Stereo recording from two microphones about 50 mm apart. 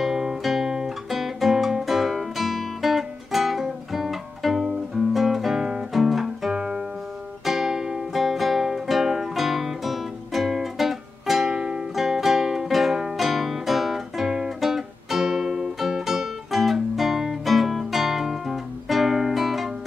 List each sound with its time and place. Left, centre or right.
0.0 s guitar: centre
7.4 s music: centre